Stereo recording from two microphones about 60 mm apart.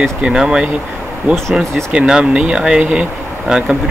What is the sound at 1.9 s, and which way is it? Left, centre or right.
Speech, centre.